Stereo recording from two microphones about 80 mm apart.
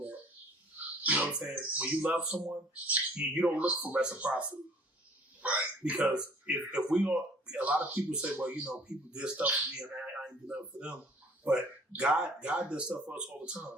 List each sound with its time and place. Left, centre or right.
1.0 s speech: centre